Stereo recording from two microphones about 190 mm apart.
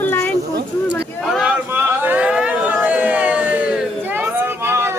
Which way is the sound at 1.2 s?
Centre (ahead or behind).